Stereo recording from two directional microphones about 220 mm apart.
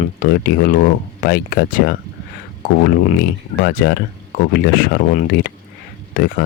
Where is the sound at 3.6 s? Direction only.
40° left (ahead or behind).